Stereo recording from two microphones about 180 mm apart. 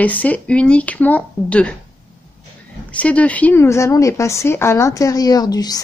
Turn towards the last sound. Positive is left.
turn(degrees=20)  # may be behind; listen again after turning